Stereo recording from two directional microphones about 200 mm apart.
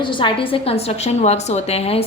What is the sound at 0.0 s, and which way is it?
A woman's voice, 25° left (ahead or behind).